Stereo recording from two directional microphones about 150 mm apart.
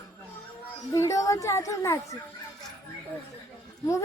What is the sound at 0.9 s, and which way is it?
Speech, 20° left (ahead or behind).